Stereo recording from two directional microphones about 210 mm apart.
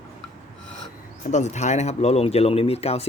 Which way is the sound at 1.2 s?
35° left (ahead or behind).